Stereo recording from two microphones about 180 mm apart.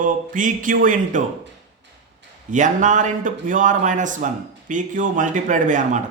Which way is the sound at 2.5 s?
45° right (ahead or behind).